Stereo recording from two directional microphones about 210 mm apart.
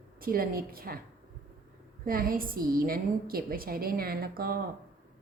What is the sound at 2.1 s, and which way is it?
A woman's voice, 45° right (ahead or behind).